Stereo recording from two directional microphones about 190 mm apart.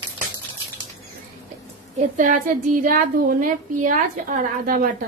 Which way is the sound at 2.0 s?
40° right (ahead or behind).